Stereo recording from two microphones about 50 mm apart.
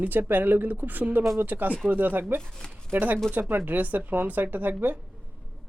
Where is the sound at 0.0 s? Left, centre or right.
Right.